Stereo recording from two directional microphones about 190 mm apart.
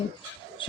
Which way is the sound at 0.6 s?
25° left (ahead or behind).